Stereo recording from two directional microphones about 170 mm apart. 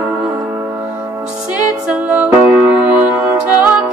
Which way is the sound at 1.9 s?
10° right (ahead or behind).